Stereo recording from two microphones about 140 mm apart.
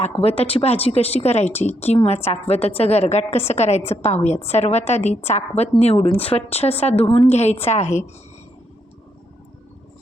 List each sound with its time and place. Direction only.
0.0 s a woman's voice: 45° left (ahead or behind)